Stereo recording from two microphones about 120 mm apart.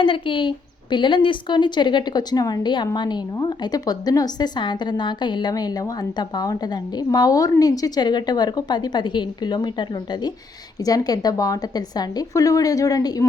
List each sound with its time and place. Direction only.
0.0 s a woman's voice: 45° left (ahead or behind)